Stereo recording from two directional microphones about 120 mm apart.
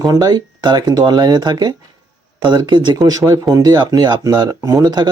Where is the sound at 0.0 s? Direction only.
30° right (ahead or behind).